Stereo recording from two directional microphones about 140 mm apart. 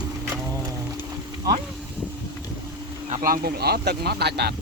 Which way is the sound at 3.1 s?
90° right.